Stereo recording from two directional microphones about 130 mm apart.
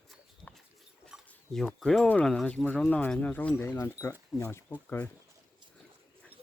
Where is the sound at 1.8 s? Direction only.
5° left (ahead or behind).